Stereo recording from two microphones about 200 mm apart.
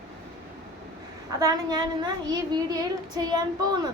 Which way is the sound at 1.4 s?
20° right (ahead or behind).